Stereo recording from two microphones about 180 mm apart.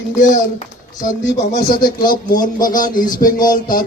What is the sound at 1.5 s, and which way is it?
Speech, 55° left (ahead or behind).